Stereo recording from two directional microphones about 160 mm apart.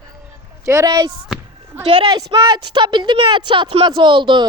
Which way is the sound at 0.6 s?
20° right (ahead or behind).